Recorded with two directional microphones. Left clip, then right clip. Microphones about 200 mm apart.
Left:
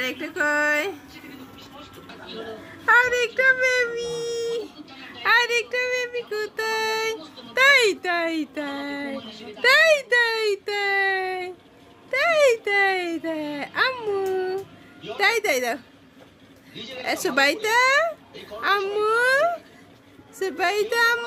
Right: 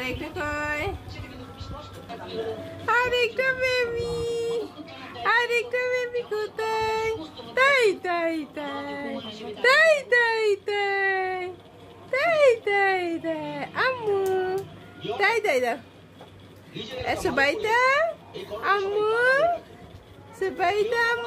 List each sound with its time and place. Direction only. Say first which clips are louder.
0.0 s music: left 5 dB; 20° left (ahead or behind)
2.8 s a child's voice: left 4 dB; 5° left (ahead or behind)
17.0 s a child's voice: left 2 dB; 20° left (ahead or behind)